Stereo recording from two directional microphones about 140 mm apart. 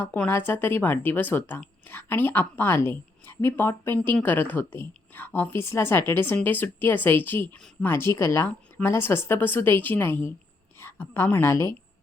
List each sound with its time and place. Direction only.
0.0 s a woman's voice: 15° left (ahead or behind)